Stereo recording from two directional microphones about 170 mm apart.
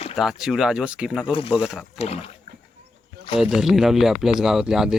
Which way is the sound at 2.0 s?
35° left (ahead or behind).